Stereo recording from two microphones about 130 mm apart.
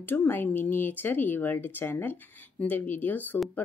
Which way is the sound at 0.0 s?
15° left (ahead or behind).